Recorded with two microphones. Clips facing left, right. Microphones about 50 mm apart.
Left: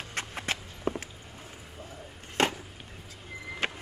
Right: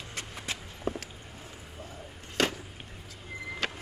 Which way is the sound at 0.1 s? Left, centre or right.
Left.